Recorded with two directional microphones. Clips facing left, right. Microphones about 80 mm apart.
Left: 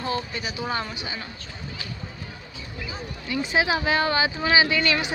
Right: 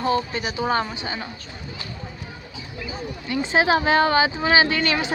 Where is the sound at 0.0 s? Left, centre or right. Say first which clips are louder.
Right 6 dB; right.